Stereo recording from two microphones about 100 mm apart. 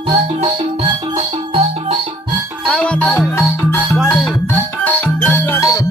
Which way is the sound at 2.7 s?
15° left (ahead or behind).